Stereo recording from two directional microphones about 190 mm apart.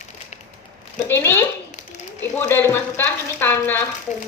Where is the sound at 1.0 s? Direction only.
10° left (ahead or behind).